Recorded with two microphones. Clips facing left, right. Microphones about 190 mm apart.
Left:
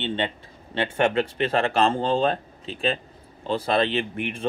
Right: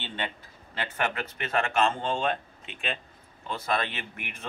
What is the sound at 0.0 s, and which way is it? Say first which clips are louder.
Speech: left 8 dB; 25° left (ahead or behind).